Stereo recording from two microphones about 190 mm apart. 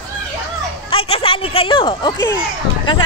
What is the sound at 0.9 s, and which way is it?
Speech, 30° left (ahead or behind).